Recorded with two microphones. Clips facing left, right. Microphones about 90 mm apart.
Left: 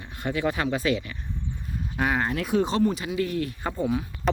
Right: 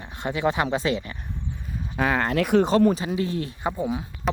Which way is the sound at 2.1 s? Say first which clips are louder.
Right 5 dB; 85° right.